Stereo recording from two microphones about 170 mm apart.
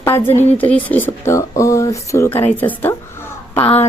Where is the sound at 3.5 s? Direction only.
35° left (ahead or behind).